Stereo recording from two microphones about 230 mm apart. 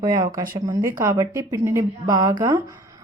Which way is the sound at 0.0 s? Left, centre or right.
Centre.